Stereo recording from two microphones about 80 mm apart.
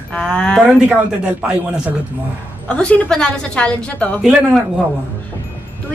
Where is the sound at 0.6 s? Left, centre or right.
Centre.